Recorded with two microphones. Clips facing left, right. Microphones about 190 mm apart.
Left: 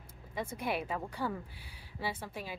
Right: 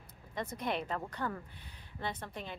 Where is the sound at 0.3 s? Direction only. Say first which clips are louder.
Left 1 dB; 5° left (ahead or behind).